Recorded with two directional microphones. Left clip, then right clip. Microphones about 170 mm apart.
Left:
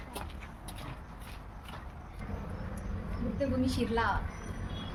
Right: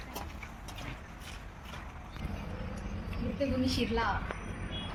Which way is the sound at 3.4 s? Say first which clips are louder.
Even; 10° left (ahead or behind).